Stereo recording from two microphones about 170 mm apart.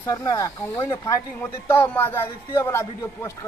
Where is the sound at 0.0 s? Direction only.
20° left (ahead or behind).